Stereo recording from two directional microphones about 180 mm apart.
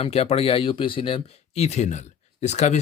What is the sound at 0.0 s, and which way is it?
Speech, 35° left (ahead or behind).